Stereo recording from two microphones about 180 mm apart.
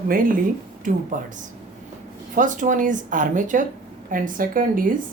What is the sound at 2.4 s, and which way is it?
Speech, 45° right (ahead or behind).